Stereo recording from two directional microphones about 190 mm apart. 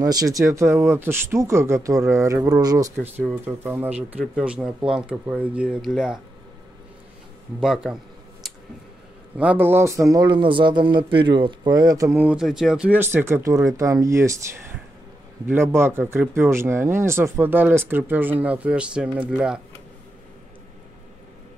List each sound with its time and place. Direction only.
0.0 s a man's voice: 20° right (ahead or behind); by 6.2 s 5° right (ahead or behind)
7.6 s speech: 5° right (ahead or behind)
9.4 s a man's voice: 10° right (ahead or behind)